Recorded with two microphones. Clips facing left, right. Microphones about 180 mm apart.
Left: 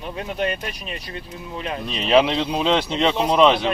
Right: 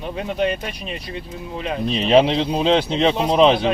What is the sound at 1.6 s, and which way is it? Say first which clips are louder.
Speech: right 4 dB; 35° right (ahead or behind).